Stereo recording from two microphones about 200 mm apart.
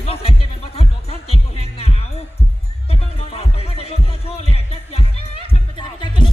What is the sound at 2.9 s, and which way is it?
Music, 30° left (ahead or behind).